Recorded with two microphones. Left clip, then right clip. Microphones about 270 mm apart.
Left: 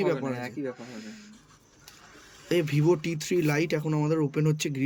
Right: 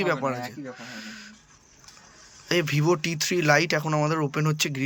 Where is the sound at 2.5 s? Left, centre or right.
Centre.